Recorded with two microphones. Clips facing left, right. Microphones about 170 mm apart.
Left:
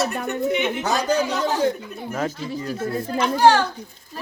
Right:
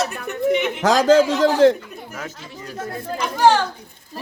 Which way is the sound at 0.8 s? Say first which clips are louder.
Right 7 dB; 90° right.